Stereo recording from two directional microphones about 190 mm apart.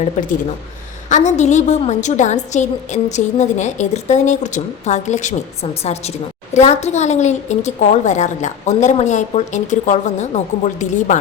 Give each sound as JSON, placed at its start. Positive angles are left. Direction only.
{"t": 0.0, "sound": "a woman's voice", "side_deg": 40}
{"t": 6.5, "sound": "a woman's voice", "side_deg": 35}